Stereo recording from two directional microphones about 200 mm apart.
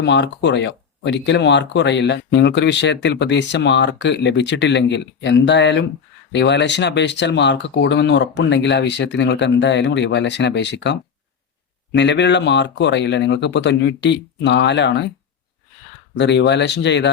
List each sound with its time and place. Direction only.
0.0 s speech: 60° left (ahead or behind)
16.1 s speech: 60° left (ahead or behind)